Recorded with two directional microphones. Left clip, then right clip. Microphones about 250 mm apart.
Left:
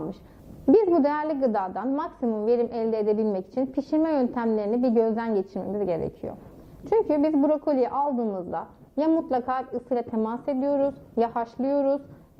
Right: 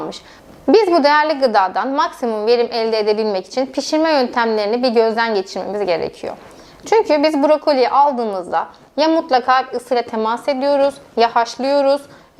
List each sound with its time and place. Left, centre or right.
0.7 s a woman's voice: centre
8.4 s a woman's voice: centre
9.0 s a woman's voice: centre